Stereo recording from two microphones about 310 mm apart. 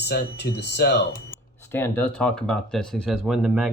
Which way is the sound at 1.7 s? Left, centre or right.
Centre.